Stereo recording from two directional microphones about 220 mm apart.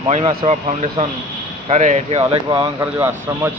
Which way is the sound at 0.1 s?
25° right (ahead or behind).